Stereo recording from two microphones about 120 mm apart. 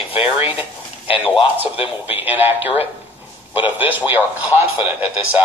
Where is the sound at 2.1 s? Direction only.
15° right (ahead or behind).